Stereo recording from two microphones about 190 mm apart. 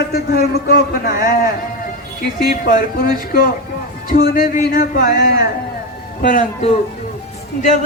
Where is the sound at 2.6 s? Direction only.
50° left (ahead or behind).